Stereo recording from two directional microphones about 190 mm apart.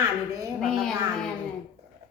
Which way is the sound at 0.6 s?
5° left (ahead or behind).